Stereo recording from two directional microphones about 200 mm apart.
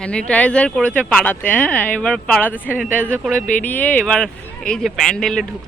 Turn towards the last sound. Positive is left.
turn(degrees=5)  # may be behind; listen again after turning